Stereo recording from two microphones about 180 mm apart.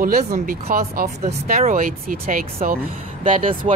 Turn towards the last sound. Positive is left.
turn(degrees=-45)  # may be behind; listen again after turning